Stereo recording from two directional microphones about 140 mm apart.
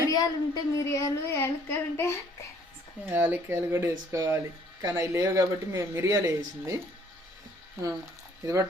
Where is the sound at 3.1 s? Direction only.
15° right (ahead or behind).